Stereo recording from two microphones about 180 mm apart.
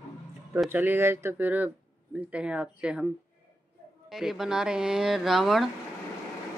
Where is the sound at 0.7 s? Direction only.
10° right (ahead or behind).